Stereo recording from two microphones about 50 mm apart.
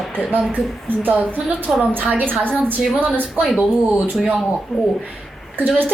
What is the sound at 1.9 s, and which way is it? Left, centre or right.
Speech, right.